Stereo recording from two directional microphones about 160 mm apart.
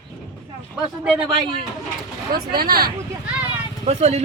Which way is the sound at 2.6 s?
70° right (ahead or behind).